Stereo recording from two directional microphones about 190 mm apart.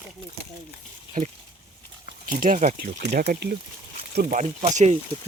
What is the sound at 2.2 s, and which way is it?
Speech, 45° right (ahead or behind).